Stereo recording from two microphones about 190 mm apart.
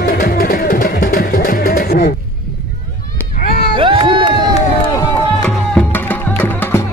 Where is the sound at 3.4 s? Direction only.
50° left (ahead or behind).